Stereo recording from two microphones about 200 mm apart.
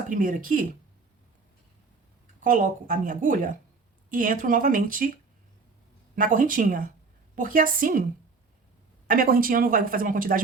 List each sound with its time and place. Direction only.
0.1 s speech: 45° right (ahead or behind)
2.4 s speech: 40° right (ahead or behind)
6.1 s speech: 45° right (ahead or behind)
9.0 s speech: 45° right (ahead or behind)